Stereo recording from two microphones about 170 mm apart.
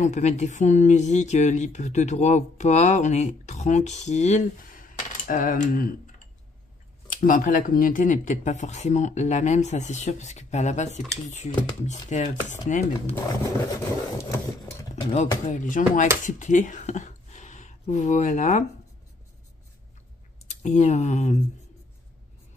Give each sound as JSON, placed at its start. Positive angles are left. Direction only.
{"t": 0.0, "sound": "speech", "side_deg": 45}
{"t": 7.1, "sound": "speech", "side_deg": 55}
{"t": 14.3, "sound": "a sound", "side_deg": 15}
{"t": 15.0, "sound": "speech", "side_deg": 40}
{"t": 20.4, "sound": "speech", "side_deg": 45}